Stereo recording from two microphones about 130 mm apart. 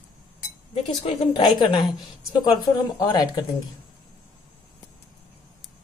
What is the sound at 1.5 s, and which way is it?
A woman's voice, 35° left (ahead or behind).